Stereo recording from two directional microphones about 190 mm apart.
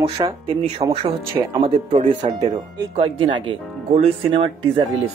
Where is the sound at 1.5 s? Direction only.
30° right (ahead or behind).